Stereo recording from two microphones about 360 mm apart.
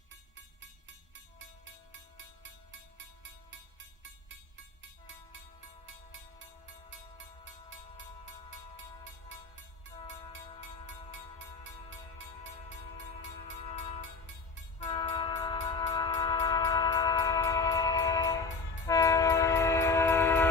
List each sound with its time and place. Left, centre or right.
1.1 s music: right
3.5 s music: right
7.4 s a sound: right
9.9 s music: centre
13.6 s music: centre
14.8 s train: centre